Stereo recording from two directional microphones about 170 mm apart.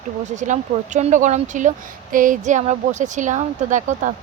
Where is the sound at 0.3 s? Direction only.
45° right (ahead or behind).